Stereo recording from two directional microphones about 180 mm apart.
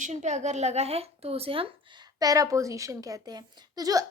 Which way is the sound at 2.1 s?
20° right (ahead or behind).